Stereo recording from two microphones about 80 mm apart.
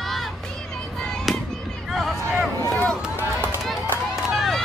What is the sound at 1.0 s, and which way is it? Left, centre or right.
Music, centre.